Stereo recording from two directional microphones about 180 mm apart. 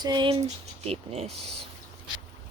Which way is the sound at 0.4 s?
35° right (ahead or behind).